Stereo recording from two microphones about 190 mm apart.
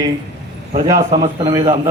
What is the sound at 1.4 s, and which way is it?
Speech, 20° right (ahead or behind).